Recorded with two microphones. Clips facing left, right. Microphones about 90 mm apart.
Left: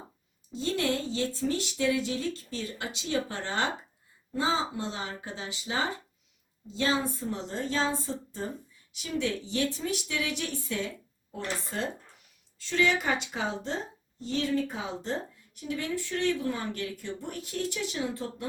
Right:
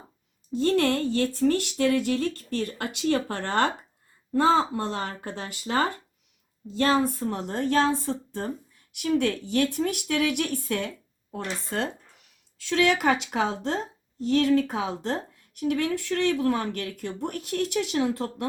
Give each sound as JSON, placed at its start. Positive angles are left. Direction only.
{"t": 0.5, "sound": "speech", "side_deg": -60}
{"t": 12.5, "sound": "a woman's voice", "side_deg": -75}